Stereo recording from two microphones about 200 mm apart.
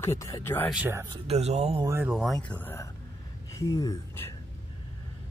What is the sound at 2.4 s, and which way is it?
Speech, 10° left (ahead or behind).